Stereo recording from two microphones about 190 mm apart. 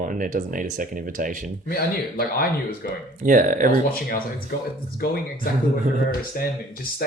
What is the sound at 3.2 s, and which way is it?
Speech, 45° right (ahead or behind).